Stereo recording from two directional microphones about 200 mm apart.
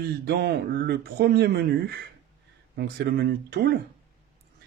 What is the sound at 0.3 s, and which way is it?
Speech, 55° right (ahead or behind).